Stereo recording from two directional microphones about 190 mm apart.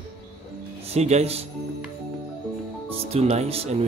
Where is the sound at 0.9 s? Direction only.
35° right (ahead or behind).